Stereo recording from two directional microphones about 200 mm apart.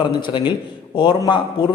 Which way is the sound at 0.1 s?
25° left (ahead or behind).